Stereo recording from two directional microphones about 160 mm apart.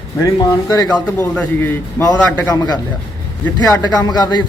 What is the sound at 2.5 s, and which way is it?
A man's voice, 25° left (ahead or behind).